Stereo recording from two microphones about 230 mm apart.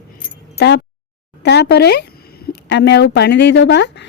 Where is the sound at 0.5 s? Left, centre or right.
Left.